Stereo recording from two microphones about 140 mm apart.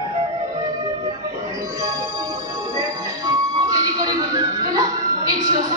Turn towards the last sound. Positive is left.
turn(degrees=-25)  # may be behind; listen again after turning